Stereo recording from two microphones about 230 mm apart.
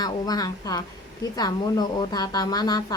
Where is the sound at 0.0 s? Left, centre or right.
Centre.